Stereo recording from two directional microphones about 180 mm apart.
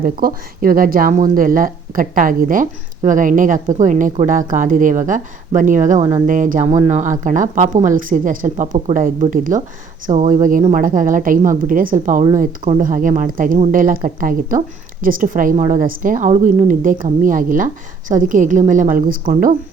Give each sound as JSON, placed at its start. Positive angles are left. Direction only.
{"t": 0.0, "sound": "a woman's voice", "side_deg": -50}
{"t": 6.0, "sound": "speech", "side_deg": -25}
{"t": 6.2, "sound": "a woman's voice", "side_deg": -45}